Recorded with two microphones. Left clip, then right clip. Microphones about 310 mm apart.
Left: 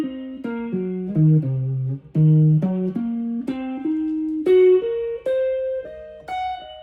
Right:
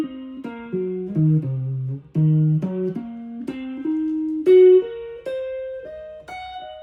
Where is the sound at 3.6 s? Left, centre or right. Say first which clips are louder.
Right 1 dB; centre.